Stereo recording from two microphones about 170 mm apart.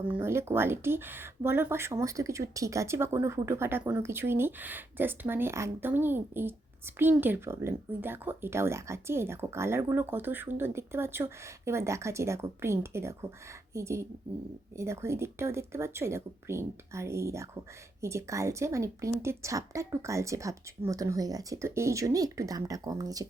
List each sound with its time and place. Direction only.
0.2 s a woman's voice: 15° right (ahead or behind)